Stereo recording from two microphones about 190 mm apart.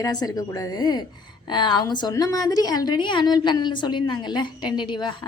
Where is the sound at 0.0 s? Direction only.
20° left (ahead or behind).